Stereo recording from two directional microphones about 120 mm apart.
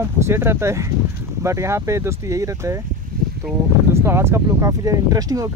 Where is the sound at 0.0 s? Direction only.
20° right (ahead or behind).